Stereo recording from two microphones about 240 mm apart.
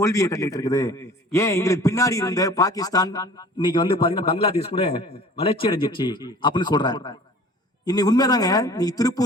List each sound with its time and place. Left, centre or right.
0.0 s a man's voice: centre